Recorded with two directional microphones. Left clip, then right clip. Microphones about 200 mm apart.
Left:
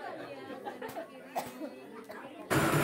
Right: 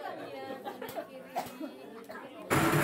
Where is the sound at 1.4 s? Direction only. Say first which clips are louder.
Right 1 dB; 25° left (ahead or behind).